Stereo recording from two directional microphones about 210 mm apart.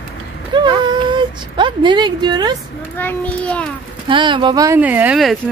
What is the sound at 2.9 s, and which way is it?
Speech, 5° left (ahead or behind).